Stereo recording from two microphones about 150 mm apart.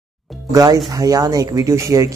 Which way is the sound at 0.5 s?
20° right (ahead or behind).